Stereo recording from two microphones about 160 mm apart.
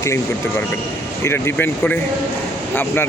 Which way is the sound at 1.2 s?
15° left (ahead or behind).